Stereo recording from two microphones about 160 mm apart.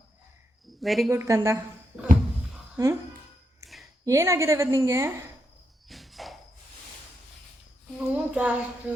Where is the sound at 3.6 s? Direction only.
20° right (ahead or behind).